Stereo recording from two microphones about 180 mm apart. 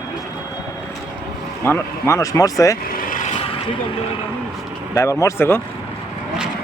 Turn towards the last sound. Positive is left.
turn(degrees=15)  # may be behind; listen again after turning